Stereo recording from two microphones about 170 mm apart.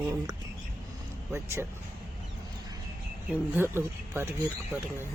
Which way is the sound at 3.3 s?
10° right (ahead or behind).